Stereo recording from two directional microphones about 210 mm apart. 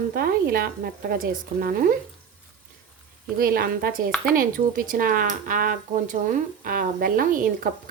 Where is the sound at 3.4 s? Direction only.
45° right (ahead or behind).